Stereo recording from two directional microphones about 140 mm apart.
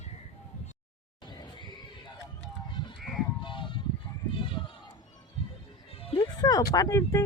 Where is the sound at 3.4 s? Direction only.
35° left (ahead or behind).